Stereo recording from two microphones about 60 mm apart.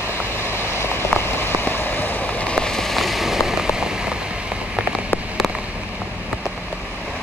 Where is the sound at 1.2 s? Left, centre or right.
Left.